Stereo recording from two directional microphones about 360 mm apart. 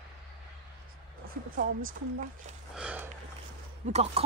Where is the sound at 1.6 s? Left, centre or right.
Right.